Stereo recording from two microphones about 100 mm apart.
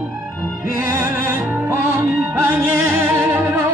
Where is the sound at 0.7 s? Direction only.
25° right (ahead or behind).